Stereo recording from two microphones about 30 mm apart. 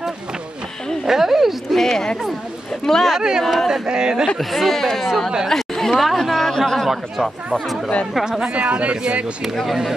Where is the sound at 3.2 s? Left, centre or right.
Centre.